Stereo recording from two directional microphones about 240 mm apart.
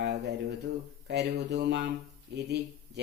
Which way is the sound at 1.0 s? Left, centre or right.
Right.